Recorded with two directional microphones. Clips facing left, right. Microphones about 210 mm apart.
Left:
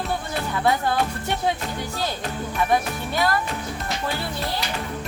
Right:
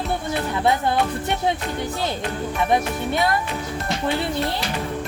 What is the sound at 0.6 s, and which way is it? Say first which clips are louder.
Music: right 1 dB; 20° right (ahead or behind).